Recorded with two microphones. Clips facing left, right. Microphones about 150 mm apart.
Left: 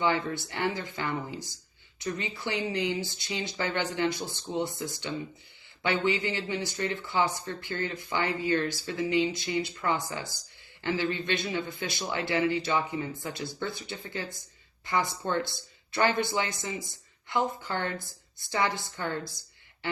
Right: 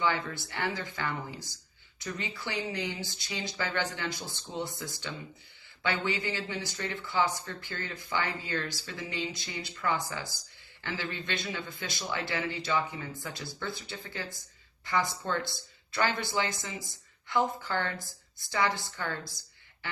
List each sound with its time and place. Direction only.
0.0 s speech: 20° left (ahead or behind)